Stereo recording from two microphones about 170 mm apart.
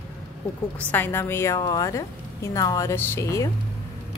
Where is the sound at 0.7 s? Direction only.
10° left (ahead or behind).